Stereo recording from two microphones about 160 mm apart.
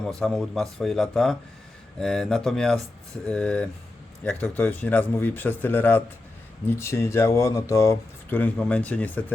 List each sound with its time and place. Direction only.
0.0 s a man's voice: 5° left (ahead or behind)